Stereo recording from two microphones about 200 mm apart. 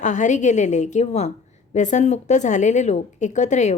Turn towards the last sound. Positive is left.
turn(degrees=35)  # may be behind; listen again after turning